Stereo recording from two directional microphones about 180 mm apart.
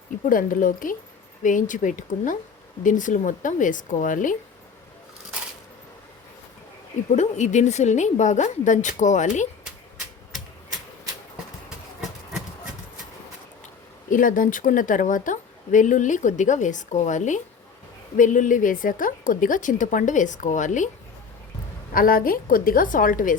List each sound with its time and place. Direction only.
0.3 s speech: 50° left (ahead or behind)
7.1 s speech: 40° left (ahead or behind)
14.1 s speech: 50° left (ahead or behind)
21.9 s speech: 50° left (ahead or behind)